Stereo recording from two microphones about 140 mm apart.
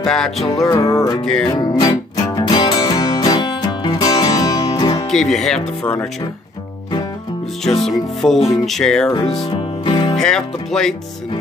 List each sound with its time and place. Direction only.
0.0 s speech: 5° left (ahead or behind)
0.7 s music: 25° left (ahead or behind)
5.1 s speech: centre (ahead or behind)
7.8 s speech: centre (ahead or behind)
9.5 s music: 35° left (ahead or behind)
10.1 s speech: 5° left (ahead or behind)